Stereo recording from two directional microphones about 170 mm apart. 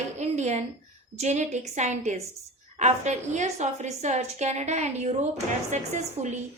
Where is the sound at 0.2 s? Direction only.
40° right (ahead or behind).